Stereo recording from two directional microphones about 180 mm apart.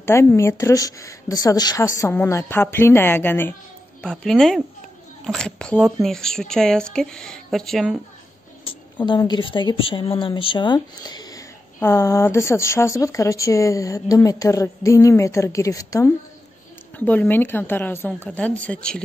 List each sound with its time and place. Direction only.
0.0 s a woman's voice: 15° left (ahead or behind); by 8.0 s centre (ahead or behind)
8.6 s a woman's voice: 25° left (ahead or behind); by 19.0 s 5° left (ahead or behind)